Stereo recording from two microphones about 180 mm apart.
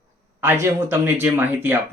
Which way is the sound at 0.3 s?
15° right (ahead or behind).